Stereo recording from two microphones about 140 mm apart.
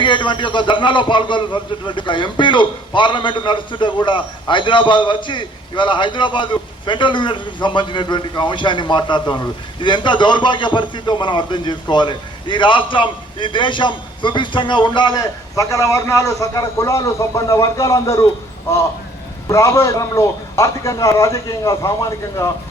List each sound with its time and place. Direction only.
0.0 s a man's voice: 35° left (ahead or behind)
19.5 s a man's voice: 20° left (ahead or behind)